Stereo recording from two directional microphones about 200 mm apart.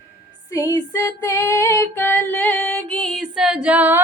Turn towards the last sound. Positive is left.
turn(degrees=-10)  # may be behind; listen again after turning